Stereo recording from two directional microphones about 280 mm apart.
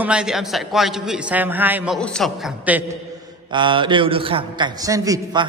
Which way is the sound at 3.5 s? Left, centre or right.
Centre.